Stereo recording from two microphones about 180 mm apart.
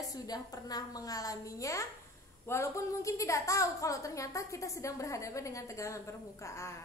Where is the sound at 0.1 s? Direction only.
20° left (ahead or behind).